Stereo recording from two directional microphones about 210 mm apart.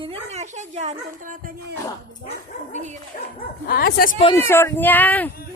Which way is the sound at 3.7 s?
45° left (ahead or behind).